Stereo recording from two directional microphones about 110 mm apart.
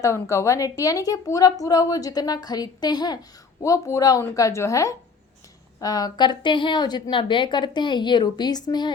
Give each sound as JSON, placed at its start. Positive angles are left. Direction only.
{"t": 0.0, "sound": "a woman's voice", "side_deg": 25}
{"t": 3.6, "sound": "a woman's voice", "side_deg": 25}